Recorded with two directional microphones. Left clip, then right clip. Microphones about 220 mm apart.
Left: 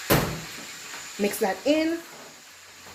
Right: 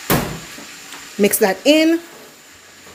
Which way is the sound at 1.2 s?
50° right (ahead or behind).